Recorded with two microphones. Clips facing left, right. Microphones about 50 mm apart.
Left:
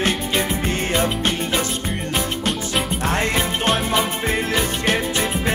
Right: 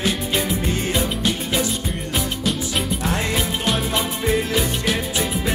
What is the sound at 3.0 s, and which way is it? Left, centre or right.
Music, left.